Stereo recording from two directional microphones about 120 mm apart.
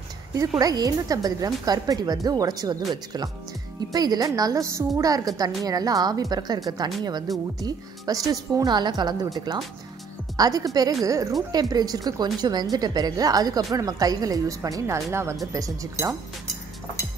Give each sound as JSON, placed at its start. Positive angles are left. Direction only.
{"t": 0.6, "sound": "a woman's voice", "side_deg": -30}